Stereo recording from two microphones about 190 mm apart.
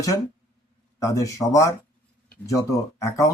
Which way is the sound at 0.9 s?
15° left (ahead or behind).